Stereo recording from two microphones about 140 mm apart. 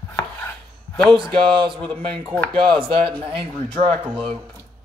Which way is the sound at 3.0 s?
40° right (ahead or behind).